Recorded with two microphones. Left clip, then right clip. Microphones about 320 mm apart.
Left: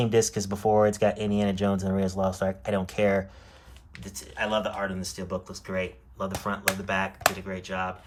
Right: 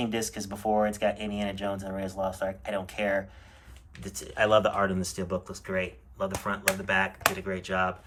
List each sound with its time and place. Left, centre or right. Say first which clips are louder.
0.0 s speech: left 8 dB; centre
4.0 s speech: right 4 dB; centre